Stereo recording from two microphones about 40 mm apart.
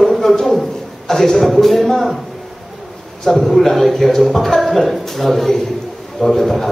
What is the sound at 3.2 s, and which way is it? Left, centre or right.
A man's voice, centre.